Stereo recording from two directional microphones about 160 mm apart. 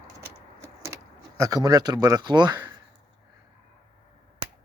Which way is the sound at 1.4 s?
20° right (ahead or behind).